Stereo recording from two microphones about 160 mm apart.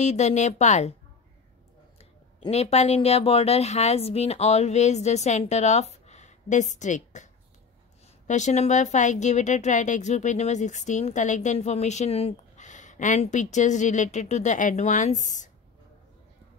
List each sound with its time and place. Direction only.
0.0 s speech: 45° left (ahead or behind)
2.0 s speech: 40° left (ahead or behind)
8.3 s speech: 50° left (ahead or behind)